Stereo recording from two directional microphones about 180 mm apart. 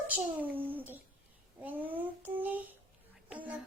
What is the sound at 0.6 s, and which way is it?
Child singing, 10° right (ahead or behind).